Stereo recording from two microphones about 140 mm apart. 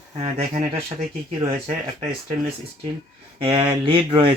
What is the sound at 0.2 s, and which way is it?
Speech, 50° right (ahead or behind).